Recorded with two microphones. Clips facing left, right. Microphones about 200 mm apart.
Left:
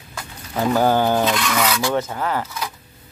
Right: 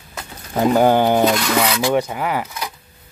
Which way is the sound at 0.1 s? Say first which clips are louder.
Right 3 dB; 20° right (ahead or behind).